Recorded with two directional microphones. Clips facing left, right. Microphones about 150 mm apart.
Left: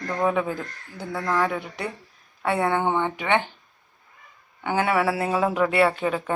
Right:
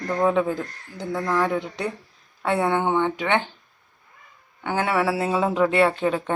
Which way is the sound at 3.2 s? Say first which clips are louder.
Even; 15° left (ahead or behind).